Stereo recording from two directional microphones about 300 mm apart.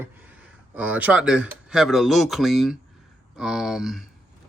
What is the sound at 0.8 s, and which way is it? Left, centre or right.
Speech, centre.